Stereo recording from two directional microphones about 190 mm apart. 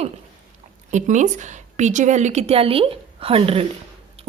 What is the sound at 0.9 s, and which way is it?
A woman's voice, 40° right (ahead or behind).